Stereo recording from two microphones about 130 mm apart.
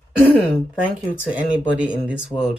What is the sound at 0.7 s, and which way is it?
Speech, 10° right (ahead or behind).